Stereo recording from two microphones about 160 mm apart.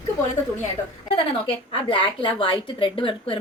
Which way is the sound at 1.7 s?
30° left (ahead or behind).